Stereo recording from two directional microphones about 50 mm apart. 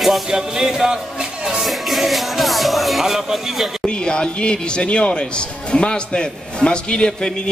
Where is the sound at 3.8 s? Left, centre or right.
Centre.